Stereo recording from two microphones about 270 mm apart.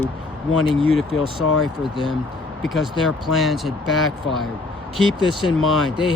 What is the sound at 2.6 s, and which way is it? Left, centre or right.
Speech, centre.